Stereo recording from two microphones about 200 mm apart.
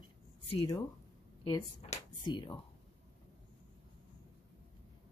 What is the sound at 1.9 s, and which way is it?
Speech, 25° left (ahead or behind).